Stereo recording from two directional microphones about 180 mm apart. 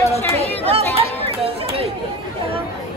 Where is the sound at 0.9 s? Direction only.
35° right (ahead or behind).